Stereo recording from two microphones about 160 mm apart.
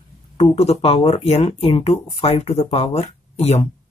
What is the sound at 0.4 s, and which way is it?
Speech, 40° left (ahead or behind).